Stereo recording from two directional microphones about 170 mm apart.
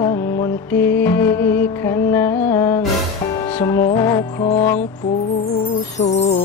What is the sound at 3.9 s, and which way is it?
Music, 15° left (ahead or behind).